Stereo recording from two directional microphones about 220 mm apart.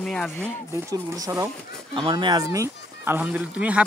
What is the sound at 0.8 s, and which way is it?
Speech, 15° right (ahead or behind).